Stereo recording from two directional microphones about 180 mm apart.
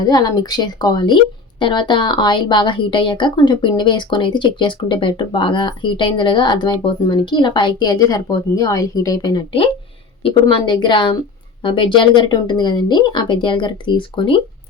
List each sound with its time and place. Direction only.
0.0 s a woman's voice: 20° left (ahead or behind)